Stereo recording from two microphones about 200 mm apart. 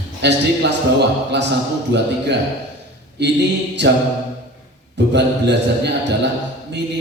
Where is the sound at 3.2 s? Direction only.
60° right (ahead or behind).